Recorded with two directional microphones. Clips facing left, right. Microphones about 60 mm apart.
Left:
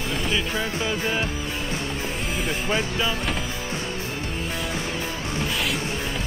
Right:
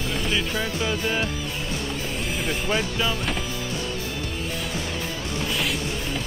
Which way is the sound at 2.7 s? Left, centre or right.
Left.